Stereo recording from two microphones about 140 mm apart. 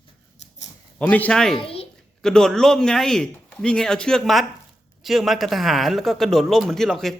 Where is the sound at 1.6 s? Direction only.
45° left (ahead or behind).